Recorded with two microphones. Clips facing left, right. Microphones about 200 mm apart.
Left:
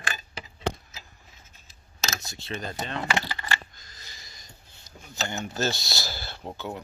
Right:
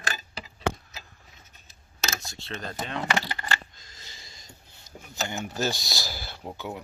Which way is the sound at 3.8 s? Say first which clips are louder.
Even; 25° right (ahead or behind).